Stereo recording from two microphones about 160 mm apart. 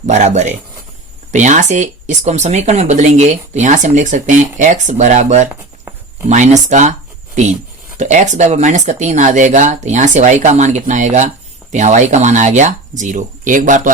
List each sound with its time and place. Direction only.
0.0 s speech: 45° right (ahead or behind)
5.5 s a sound: 15° right (ahead or behind)
6.2 s speech: 45° right (ahead or behind)
7.9 s speech: 50° right (ahead or behind)